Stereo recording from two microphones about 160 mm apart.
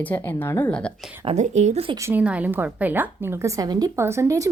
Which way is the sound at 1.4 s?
45° right (ahead or behind).